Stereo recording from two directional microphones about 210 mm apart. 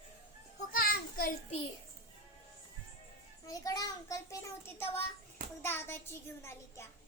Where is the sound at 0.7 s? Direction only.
45° left (ahead or behind).